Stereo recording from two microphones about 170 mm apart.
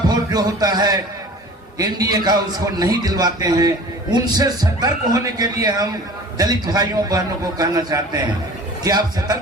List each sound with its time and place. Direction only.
0.1 s music: 20° right (ahead or behind)
1.8 s a man's voice: 20° right (ahead or behind)